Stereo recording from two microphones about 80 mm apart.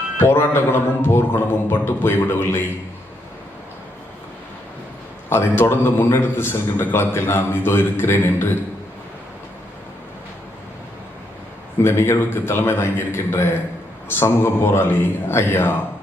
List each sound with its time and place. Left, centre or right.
0.2 s a man's voice: left
5.3 s a man's voice: left
11.8 s a man's voice: left